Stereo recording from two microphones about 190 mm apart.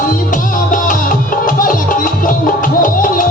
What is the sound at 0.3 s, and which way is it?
Music, 45° left (ahead or behind).